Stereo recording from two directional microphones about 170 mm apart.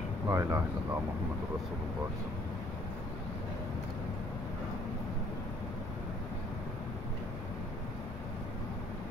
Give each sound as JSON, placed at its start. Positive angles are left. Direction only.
{"t": 0.3, "sound": "speech", "side_deg": -15}